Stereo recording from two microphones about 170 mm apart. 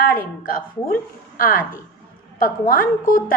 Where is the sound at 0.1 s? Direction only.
55° left (ahead or behind).